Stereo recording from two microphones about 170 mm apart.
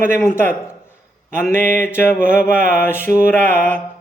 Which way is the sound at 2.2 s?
50° right (ahead or behind).